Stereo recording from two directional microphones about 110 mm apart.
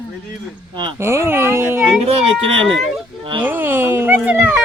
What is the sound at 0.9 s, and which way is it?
Speech, 25° right (ahead or behind).